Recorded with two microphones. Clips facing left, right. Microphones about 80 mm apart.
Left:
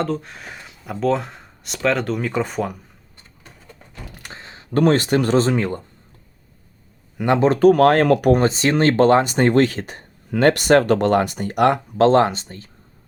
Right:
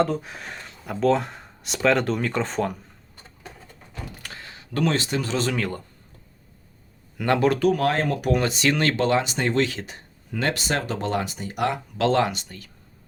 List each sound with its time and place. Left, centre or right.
0.0 s speech: centre
4.2 s a sound: left
4.7 s speech: left
5.4 s speech: left
7.2 s speech: left
7.6 s speech: left
8.3 s speech: left
11.9 s speech: left